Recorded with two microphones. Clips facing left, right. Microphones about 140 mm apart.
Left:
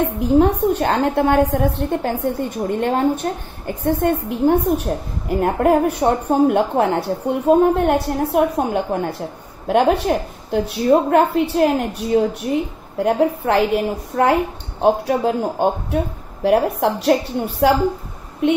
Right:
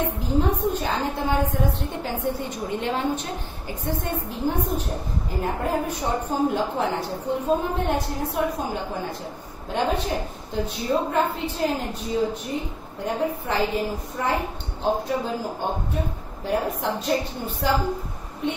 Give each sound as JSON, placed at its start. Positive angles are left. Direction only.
{"t": 0.2, "sound": "a woman's voice", "side_deg": 65}